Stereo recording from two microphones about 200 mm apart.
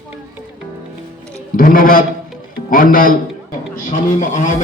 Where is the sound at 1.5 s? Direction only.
45° left (ahead or behind).